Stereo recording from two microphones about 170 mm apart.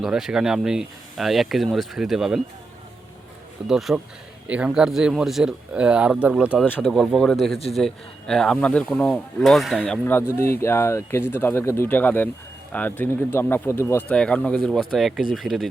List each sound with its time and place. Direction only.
0.0 s speech: 5° right (ahead or behind)
3.7 s speech: centre (ahead or behind)